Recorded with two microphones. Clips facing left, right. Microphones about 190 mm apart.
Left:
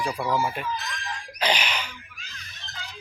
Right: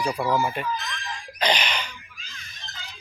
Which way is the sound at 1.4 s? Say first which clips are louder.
Right 1 dB; 10° left (ahead or behind).